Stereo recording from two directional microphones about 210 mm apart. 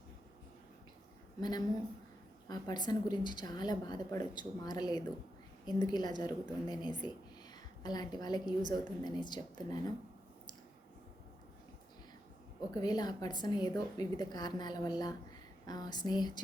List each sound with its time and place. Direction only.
1.4 s a woman's voice: 20° left (ahead or behind)
12.7 s a woman's voice: 20° left (ahead or behind)